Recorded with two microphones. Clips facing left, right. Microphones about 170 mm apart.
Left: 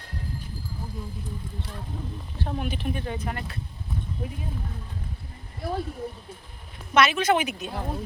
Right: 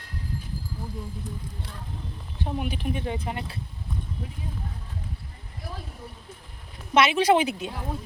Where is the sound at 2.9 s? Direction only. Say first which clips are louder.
Right 1 dB; 20° right (ahead or behind).